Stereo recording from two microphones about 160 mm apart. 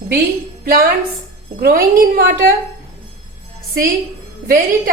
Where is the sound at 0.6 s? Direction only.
70° right (ahead or behind).